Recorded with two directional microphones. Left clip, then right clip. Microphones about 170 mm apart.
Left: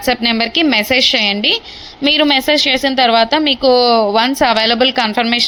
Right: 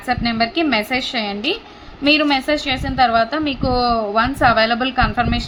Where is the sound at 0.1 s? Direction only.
30° left (ahead or behind).